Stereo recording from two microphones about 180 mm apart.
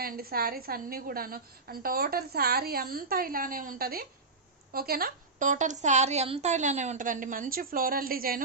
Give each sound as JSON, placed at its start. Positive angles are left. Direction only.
{"t": 0.0, "sound": "a woman's voice", "side_deg": -55}